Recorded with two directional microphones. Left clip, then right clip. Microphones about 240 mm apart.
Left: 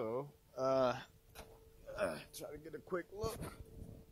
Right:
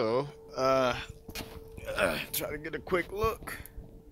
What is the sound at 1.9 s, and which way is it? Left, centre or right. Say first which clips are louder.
Speech: right 11 dB; centre.